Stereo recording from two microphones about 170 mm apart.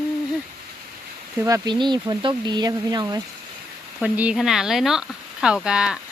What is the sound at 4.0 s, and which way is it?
Speech, 5° right (ahead or behind).